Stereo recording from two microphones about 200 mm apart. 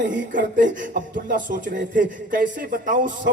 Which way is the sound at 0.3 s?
40° right (ahead or behind).